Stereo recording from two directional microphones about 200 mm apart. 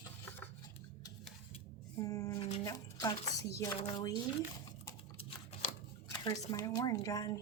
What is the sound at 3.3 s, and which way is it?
Speech, 15° left (ahead or behind).